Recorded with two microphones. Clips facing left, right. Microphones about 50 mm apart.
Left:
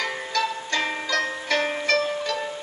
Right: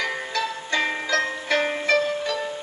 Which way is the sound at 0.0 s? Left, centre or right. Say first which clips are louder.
Even; centre.